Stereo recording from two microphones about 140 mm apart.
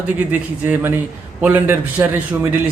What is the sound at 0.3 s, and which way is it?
Speech, 15° right (ahead or behind).